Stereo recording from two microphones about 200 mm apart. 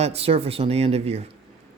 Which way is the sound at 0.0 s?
30° right (ahead or behind).